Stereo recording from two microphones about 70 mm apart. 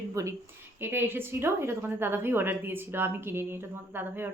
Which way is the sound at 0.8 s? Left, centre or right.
Right.